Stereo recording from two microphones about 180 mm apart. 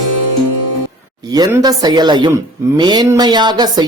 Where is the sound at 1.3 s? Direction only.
20° right (ahead or behind).